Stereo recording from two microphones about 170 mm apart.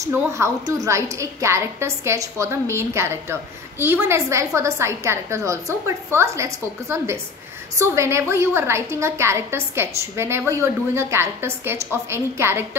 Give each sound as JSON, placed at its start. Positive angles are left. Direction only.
{"t": 0.0, "sound": "a woman's voice", "side_deg": -15}